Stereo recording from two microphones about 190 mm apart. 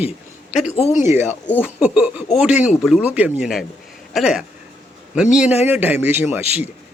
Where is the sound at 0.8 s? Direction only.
35° left (ahead or behind).